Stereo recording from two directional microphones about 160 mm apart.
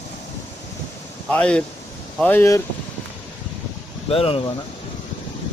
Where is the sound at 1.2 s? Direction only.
5° left (ahead or behind).